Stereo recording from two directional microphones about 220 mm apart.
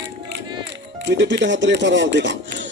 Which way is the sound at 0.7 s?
50° right (ahead or behind).